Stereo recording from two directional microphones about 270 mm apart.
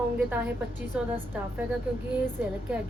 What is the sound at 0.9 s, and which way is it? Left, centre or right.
Speech, centre.